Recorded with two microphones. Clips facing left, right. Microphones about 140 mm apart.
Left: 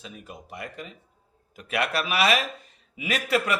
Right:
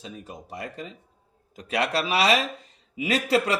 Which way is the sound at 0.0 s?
30° right (ahead or behind).